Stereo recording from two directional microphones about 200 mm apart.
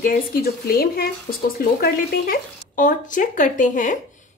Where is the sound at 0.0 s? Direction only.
45° left (ahead or behind).